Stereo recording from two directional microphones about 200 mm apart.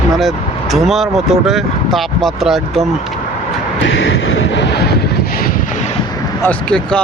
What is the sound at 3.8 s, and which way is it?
Vehicle, 70° left (ahead or behind).